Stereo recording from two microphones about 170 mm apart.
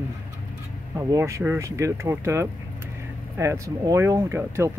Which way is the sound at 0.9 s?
15° right (ahead or behind).